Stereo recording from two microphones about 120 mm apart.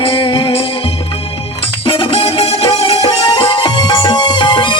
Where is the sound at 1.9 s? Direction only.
45° left (ahead or behind).